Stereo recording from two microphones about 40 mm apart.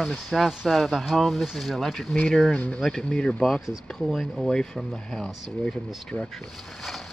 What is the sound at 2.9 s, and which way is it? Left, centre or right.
Speech, centre.